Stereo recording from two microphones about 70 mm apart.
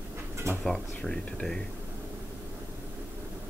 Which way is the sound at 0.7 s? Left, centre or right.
Centre.